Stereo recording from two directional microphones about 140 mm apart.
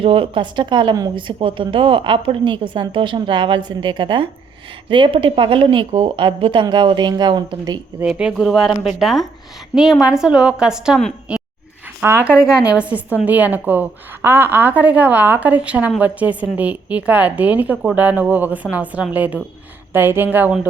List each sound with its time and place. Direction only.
0.0 s speech: 40° right (ahead or behind)
8.0 s a woman's voice: 5° right (ahead or behind)